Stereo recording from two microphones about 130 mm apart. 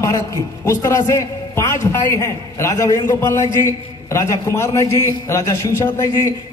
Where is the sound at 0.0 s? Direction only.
25° left (ahead or behind).